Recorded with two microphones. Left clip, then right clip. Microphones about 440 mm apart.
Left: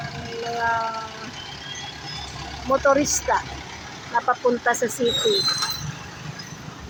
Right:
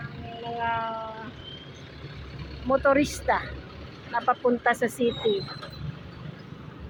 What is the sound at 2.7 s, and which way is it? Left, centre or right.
Speech, right.